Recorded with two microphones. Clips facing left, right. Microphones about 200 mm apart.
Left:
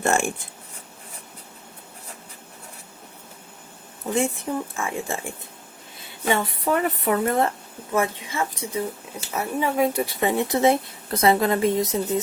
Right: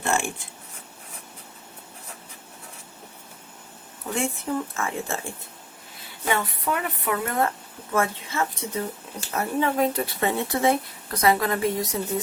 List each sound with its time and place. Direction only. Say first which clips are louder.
4.1 s speech: left 3 dB; 15° left (ahead or behind)
6.2 s a woman's voice: left 3 dB; 30° left (ahead or behind)
7.9 s speech: left 1 dB; 15° left (ahead or behind)